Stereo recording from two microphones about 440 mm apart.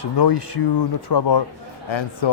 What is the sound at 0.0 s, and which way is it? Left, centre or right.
Speech, left.